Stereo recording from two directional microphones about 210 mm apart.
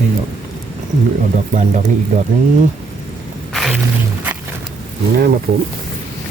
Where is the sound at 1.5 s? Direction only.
35° right (ahead or behind).